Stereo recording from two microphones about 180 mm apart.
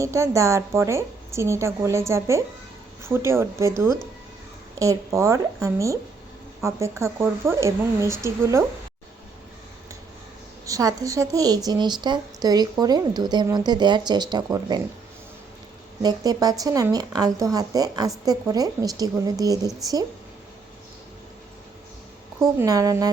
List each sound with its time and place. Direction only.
0.0 s a woman's voice: 15° right (ahead or behind)
10.7 s a woman's voice: 20° right (ahead or behind)
16.0 s a woman's voice: 20° right (ahead or behind)
22.5 s a woman's voice: 20° right (ahead or behind)